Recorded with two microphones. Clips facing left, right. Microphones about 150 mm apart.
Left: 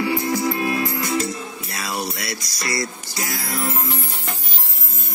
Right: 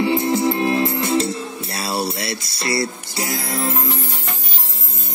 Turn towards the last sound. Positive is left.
turn(degrees=-25)  # may be behind; listen again after turning